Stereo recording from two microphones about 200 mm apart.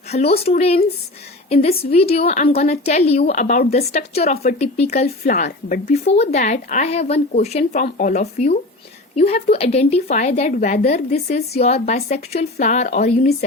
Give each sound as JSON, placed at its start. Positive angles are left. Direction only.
{"t": 0.1, "sound": "speech", "side_deg": 30}
{"t": 5.0, "sound": "speech", "side_deg": 45}